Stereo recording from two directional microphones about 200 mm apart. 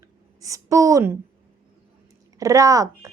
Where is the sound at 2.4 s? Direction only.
15° right (ahead or behind).